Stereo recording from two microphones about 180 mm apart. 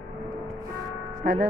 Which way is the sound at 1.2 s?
60° right (ahead or behind).